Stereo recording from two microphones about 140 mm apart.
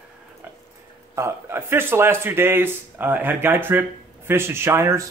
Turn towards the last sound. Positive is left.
turn(degrees=-20)  # may be behind; listen again after turning